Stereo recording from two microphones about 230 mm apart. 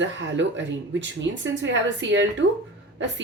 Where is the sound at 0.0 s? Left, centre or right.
Right.